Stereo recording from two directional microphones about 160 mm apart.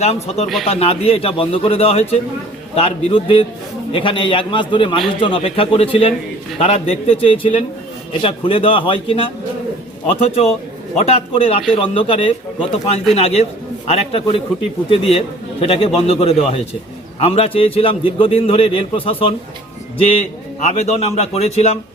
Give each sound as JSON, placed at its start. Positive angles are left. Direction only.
{"t": 0.0, "sound": "a man's voice", "side_deg": 40}
{"t": 20.6, "sound": "a man's voice", "side_deg": 45}